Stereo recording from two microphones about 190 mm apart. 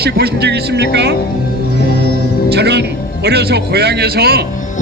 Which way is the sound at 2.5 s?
60° right (ahead or behind).